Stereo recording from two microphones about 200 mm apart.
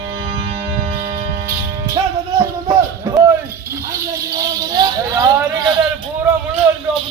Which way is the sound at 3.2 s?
Centre (ahead or behind).